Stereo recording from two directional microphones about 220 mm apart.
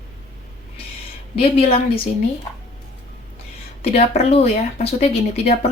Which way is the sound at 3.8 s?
25° left (ahead or behind).